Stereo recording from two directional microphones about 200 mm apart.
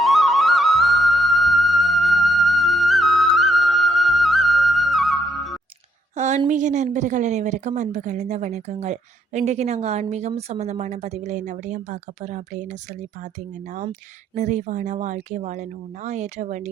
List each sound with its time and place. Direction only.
0.0 s music: centre (ahead or behind)
6.1 s a sound: 35° right (ahead or behind)
6.5 s speech: 35° right (ahead or behind)